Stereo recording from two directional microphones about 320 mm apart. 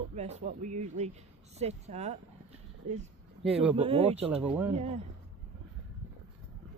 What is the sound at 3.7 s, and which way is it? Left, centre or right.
Speech, centre.